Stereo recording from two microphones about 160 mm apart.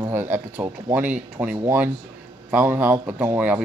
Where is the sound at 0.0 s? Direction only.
10° right (ahead or behind).